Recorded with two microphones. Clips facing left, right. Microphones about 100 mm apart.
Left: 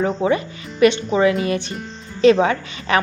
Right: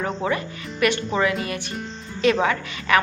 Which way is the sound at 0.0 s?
25° left (ahead or behind).